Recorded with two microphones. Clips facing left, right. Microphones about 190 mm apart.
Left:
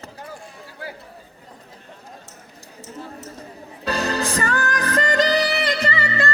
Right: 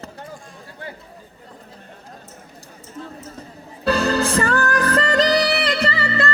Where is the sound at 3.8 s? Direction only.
35° right (ahead or behind).